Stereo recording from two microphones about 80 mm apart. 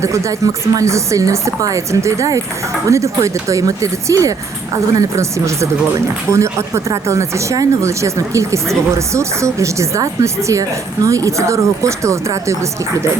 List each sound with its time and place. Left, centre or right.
0.0 s speech: right